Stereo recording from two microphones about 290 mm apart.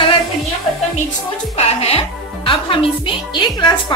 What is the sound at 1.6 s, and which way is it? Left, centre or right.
Speech, centre.